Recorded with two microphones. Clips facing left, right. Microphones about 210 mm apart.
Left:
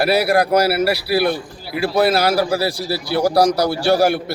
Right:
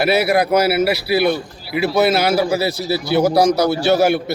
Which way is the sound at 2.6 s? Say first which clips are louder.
Right 2 dB; 20° right (ahead or behind).